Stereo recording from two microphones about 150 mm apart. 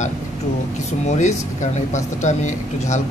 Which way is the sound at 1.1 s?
55° left (ahead or behind).